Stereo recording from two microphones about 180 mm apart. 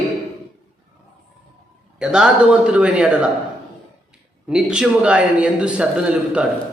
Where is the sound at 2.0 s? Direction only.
5° right (ahead or behind).